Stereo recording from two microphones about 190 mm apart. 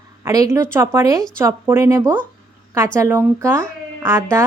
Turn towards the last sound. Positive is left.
turn(degrees=-15)  # may be behind; listen again after turning